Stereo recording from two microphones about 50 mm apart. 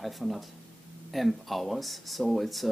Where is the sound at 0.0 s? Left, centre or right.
Centre.